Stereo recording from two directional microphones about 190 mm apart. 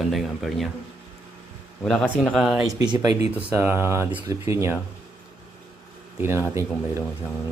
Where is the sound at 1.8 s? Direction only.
Centre (ahead or behind).